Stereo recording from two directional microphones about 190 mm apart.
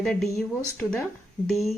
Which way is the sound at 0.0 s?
5° left (ahead or behind).